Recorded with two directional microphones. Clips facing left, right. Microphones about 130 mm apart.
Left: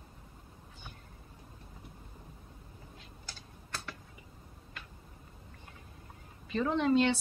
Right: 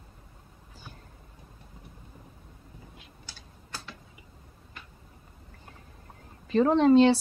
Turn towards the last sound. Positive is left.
turn(degrees=-35)  # may be behind; listen again after turning